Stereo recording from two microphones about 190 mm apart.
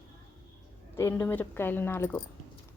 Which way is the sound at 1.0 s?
15° left (ahead or behind).